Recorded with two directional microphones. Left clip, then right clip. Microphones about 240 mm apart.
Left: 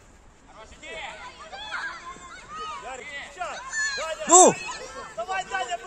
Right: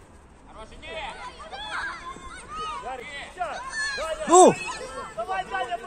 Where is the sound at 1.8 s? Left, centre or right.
Right.